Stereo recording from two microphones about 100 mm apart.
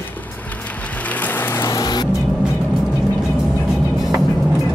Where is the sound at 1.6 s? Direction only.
40° left (ahead or behind).